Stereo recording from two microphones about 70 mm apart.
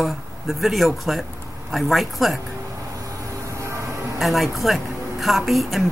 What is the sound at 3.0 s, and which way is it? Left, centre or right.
Vehicle, right.